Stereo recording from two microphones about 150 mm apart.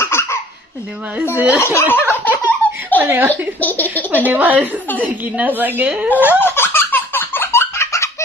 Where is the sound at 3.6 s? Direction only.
10° left (ahead or behind).